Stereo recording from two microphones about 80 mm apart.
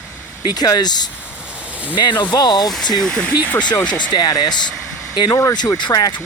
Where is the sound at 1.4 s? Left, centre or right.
Centre.